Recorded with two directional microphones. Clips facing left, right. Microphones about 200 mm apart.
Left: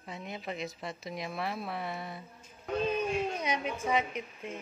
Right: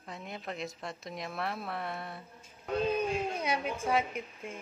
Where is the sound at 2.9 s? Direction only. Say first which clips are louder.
Even; 10° right (ahead or behind).